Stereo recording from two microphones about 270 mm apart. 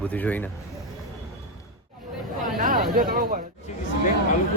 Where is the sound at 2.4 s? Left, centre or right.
Right.